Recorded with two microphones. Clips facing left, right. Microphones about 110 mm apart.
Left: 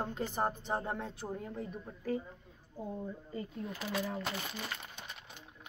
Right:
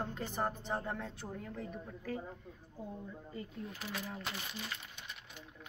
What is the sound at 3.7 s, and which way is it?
Speech, 85° left.